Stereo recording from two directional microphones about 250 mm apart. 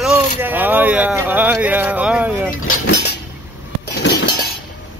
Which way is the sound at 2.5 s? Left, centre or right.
Left.